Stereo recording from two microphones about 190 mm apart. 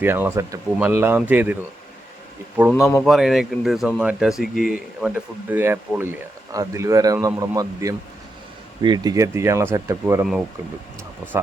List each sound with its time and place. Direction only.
0.0 s speech: 10° right (ahead or behind)
3.0 s speech: centre (ahead or behind)